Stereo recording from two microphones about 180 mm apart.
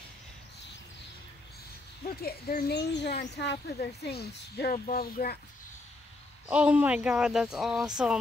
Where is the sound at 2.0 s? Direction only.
55° left (ahead or behind).